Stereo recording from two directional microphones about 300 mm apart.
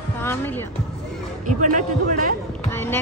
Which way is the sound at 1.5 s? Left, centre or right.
Right.